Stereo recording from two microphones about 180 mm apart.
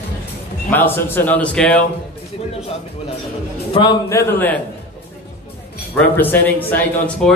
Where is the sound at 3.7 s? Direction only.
20° left (ahead or behind).